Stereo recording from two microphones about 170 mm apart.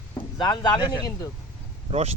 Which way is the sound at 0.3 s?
25° left (ahead or behind).